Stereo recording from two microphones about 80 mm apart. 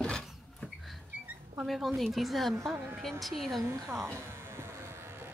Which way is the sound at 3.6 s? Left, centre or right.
Right.